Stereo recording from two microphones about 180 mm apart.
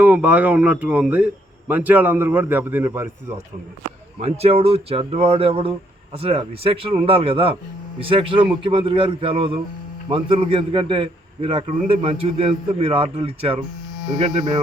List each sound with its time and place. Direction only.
0.0 s a man's voice: 10° right (ahead or behind)
4.2 s a man's voice: 35° right (ahead or behind)